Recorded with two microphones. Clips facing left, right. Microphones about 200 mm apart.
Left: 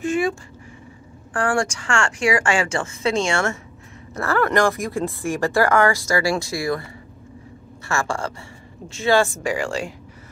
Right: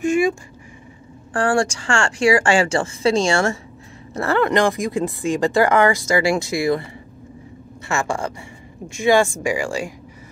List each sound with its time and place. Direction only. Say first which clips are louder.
0.0 s speech: right 4 dB; 15° right (ahead or behind)
1.3 s a woman's voice: right 3 dB; 30° right (ahead or behind)
7.9 s speech: right 2 dB; 20° right (ahead or behind)